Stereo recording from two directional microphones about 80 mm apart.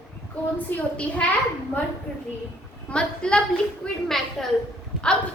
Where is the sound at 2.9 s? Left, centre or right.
Centre.